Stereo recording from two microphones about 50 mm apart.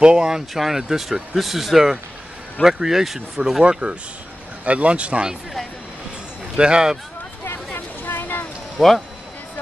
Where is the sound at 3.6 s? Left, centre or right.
Centre.